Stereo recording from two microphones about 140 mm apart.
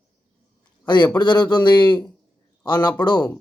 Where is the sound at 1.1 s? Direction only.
35° left (ahead or behind).